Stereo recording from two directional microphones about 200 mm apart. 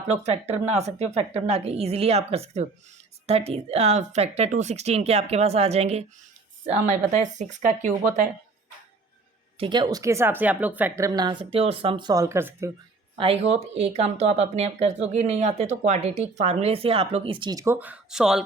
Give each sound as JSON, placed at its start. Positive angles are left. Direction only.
{"t": 0.1, "sound": "speech", "side_deg": -35}
{"t": 9.6, "sound": "speech", "side_deg": -25}
{"t": 13.1, "sound": "speech", "side_deg": -30}